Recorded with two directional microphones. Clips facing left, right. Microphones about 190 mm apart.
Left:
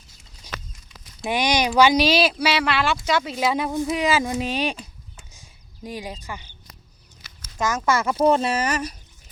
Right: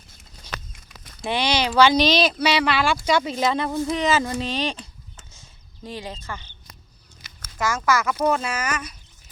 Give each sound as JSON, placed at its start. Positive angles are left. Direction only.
{"t": 0.5, "sound": "a sound", "side_deg": -60}
{"t": 1.3, "sound": "speech", "side_deg": 15}
{"t": 7.9, "sound": "speech", "side_deg": 30}